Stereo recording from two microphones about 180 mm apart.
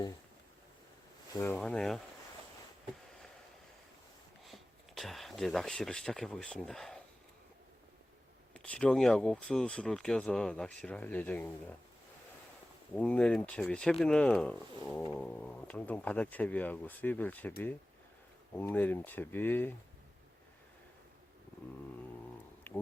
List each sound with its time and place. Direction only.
1.3 s speech: 15° left (ahead or behind)
1.5 s speech: 5° left (ahead or behind)
4.4 s speech: centre (ahead or behind)
8.5 s speech: 5° left (ahead or behind)
12.9 s speech: 5° left (ahead or behind)
18.5 s speech: 10° left (ahead or behind)